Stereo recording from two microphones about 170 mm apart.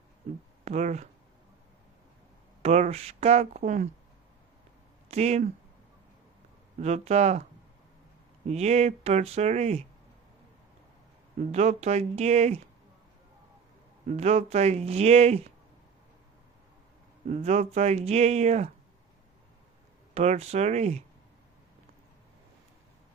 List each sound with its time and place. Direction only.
0.6 s speech: 40° right (ahead or behind)
2.6 s speech: 40° right (ahead or behind)
5.0 s speech: 40° right (ahead or behind)
6.7 s speech: 40° right (ahead or behind)
8.4 s speech: 40° right (ahead or behind)
11.3 s speech: 45° right (ahead or behind)
14.1 s speech: 40° right (ahead or behind)
17.2 s speech: 45° right (ahead or behind)
20.1 s speech: 40° right (ahead or behind)